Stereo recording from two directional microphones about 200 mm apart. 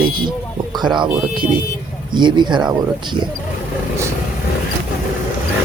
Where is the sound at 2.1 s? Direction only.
20° right (ahead or behind).